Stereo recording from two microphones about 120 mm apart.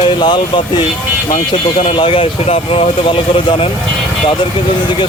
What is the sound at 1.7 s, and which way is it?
Speech, 60° left (ahead or behind).